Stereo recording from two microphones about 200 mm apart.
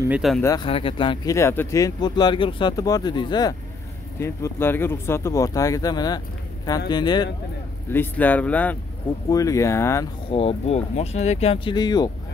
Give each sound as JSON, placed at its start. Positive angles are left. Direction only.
{"t": 0.4, "sound": "speech", "side_deg": 15}
{"t": 0.7, "sound": "speech", "side_deg": 25}
{"t": 7.9, "sound": "speech", "side_deg": 10}
{"t": 10.3, "sound": "speech", "side_deg": 30}